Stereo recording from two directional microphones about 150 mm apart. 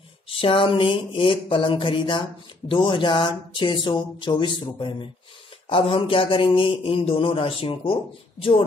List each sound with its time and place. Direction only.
0.3 s a man's voice: 35° left (ahead or behind)